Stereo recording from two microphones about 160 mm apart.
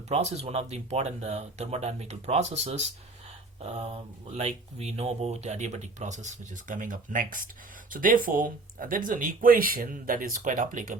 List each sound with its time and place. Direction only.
0.1 s speech: 45° right (ahead or behind)